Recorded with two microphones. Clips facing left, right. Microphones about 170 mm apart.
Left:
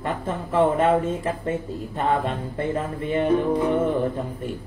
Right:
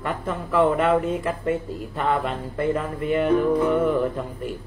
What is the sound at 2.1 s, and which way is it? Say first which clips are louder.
Music: even; 25° left (ahead or behind).